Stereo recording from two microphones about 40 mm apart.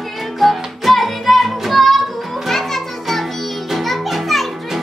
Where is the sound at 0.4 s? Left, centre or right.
Centre.